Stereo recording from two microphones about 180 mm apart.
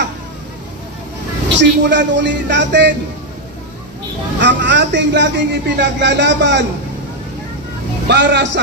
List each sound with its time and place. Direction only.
1.6 s speech: 80° right
4.4 s a man's voice: 80° right
8.1 s a man's voice: 75° right (ahead or behind)